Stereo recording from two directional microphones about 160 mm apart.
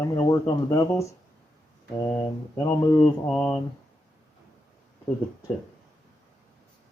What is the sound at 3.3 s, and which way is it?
Speech, 5° left (ahead or behind).